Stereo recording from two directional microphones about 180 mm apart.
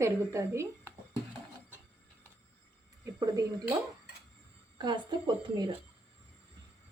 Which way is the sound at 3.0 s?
20° right (ahead or behind).